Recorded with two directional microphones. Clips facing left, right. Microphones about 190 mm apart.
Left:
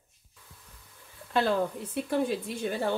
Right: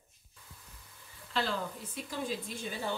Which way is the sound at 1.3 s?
60° left (ahead or behind).